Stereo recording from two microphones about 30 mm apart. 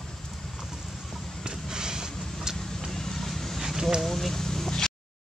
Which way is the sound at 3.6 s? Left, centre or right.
Centre.